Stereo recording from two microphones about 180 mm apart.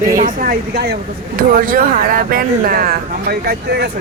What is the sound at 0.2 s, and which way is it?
Speech, 50° right (ahead or behind).